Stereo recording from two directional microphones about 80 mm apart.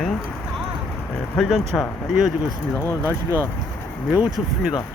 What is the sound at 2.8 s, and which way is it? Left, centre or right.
Speech, left.